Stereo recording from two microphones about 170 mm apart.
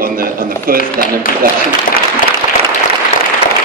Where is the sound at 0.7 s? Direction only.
55° left (ahead or behind).